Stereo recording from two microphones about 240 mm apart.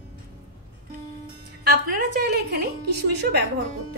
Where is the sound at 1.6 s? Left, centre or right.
Right.